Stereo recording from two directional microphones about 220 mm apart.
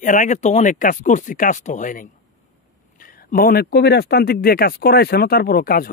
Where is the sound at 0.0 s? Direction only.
35° left (ahead or behind).